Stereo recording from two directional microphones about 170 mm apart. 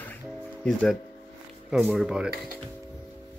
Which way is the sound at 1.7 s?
5° right (ahead or behind).